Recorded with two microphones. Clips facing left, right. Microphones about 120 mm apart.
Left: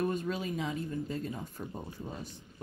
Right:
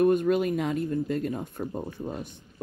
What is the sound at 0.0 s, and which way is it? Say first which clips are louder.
Speech: right 11 dB; 60° right (ahead or behind).